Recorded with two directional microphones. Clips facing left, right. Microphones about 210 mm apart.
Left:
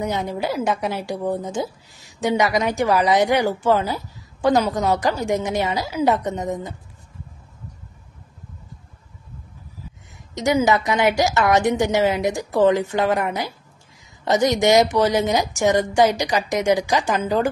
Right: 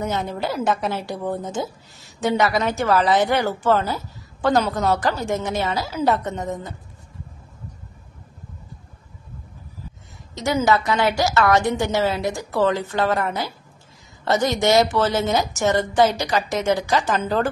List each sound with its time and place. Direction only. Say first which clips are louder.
0.0 s a woman's voice: left 1 dB; 15° left (ahead or behind)
10.3 s a woman's voice: left 1 dB; 15° left (ahead or behind)